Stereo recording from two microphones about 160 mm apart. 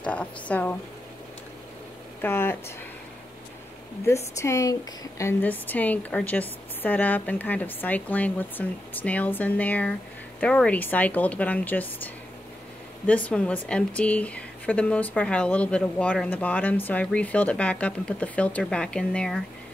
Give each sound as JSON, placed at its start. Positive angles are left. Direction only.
{"t": 0.0, "sound": "speech", "side_deg": 10}
{"t": 2.2, "sound": "speech", "side_deg": 15}
{"t": 4.4, "sound": "speech", "side_deg": 20}
{"t": 13.0, "sound": "speech", "side_deg": 10}